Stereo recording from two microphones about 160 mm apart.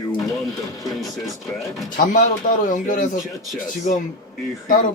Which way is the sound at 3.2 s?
Centre (ahead or behind).